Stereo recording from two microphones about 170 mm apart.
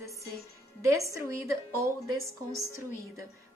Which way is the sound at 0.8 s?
15° right (ahead or behind).